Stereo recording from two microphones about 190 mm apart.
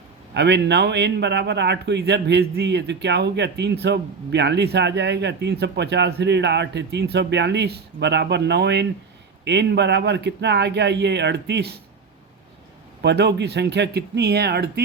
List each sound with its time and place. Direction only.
0.3 s a man's voice: 65° right (ahead or behind)
13.0 s a man's voice: 65° right (ahead or behind)